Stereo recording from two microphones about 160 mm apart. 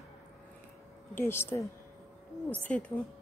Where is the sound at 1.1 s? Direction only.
15° left (ahead or behind).